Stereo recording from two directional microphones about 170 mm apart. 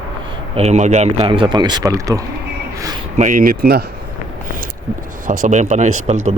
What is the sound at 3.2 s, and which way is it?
Speech, 50° right (ahead or behind).